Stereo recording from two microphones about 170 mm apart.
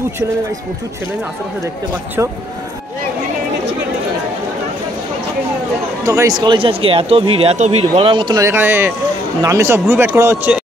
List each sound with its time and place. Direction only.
2.2 s speech: 15° right (ahead or behind)
6.0 s speech: 20° right (ahead or behind)